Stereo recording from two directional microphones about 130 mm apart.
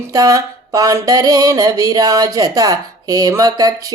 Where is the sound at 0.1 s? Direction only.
25° right (ahead or behind).